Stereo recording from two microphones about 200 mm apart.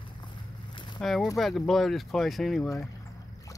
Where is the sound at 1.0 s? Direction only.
Centre (ahead or behind).